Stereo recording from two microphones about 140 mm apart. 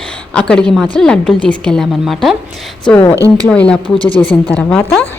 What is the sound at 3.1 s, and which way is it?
Speech, 20° right (ahead or behind).